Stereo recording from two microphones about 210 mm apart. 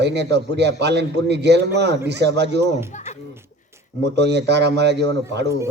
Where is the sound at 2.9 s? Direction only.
35° left (ahead or behind).